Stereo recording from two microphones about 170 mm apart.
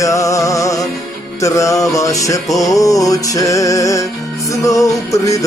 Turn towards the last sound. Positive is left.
turn(degrees=20)  # may be behind; listen again after turning